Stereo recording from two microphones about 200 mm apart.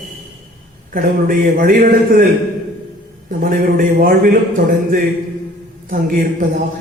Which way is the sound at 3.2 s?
40° right (ahead or behind).